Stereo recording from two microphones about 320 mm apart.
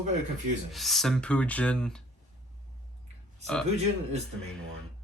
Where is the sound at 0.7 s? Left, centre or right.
Centre.